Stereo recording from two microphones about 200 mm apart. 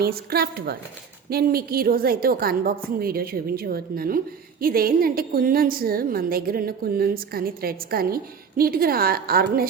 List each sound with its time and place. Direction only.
0.0 s a woman's voice: 50° right (ahead or behind)